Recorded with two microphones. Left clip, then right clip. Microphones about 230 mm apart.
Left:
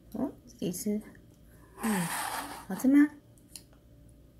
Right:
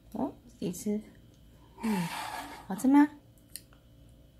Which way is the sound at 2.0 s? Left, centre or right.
Left.